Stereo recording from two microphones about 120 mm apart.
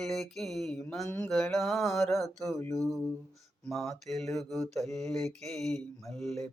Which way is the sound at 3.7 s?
Centre (ahead or behind).